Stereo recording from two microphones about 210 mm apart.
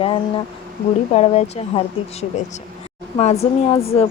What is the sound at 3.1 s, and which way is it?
Speech, 30° left (ahead or behind).